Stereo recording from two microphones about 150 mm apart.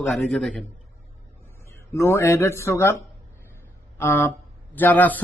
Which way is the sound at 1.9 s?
20° left (ahead or behind).